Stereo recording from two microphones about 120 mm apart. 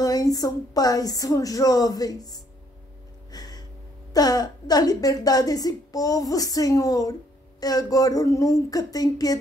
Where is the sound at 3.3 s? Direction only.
30° left (ahead or behind).